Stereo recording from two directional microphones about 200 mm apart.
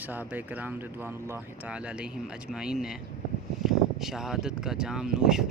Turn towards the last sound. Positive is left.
turn(degrees=-5)  # may be behind; listen again after turning